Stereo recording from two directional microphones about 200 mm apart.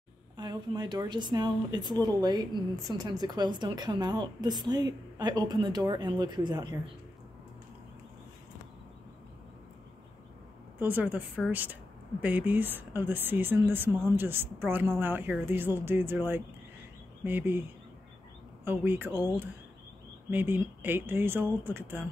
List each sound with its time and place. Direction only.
0.4 s speech: 20° right (ahead or behind)
10.8 s speech: 10° right (ahead or behind)